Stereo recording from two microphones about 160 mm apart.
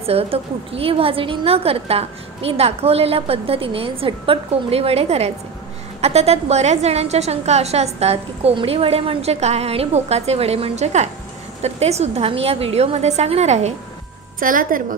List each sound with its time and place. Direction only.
0.0 s a woman's voice: 40° right (ahead or behind)
14.4 s a woman's voice: 60° right (ahead or behind)